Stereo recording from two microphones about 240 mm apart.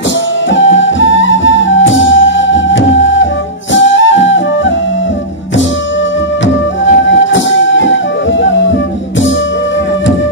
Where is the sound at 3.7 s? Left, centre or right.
Left.